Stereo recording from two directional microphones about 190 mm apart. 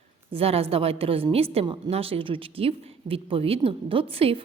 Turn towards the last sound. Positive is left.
turn(degrees=-30)  # may be behind; listen again after turning